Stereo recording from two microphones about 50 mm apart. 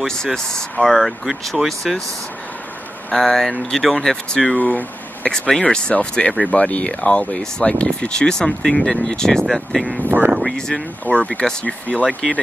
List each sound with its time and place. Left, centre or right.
0.0 s speech: centre
3.2 s speech: centre
4.6 s speech: left; by 9.4 s centre
9.5 s speech: centre
10.0 s a sound: right
10.5 s speech: centre